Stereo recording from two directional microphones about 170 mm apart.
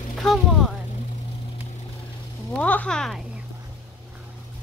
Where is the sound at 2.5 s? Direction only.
10° left (ahead or behind).